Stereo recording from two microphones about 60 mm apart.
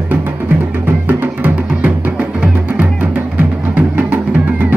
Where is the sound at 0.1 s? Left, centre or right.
Right.